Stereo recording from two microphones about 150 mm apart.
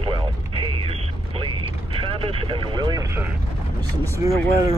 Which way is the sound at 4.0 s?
20° right (ahead or behind).